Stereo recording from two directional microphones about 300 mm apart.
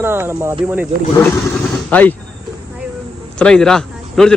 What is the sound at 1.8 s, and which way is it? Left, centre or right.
Speech, centre.